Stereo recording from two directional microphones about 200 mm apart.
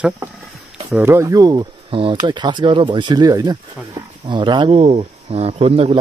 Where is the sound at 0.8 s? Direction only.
10° right (ahead or behind).